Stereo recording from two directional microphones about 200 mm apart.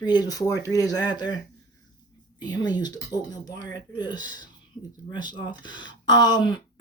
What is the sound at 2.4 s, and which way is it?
Speech, 20° left (ahead or behind).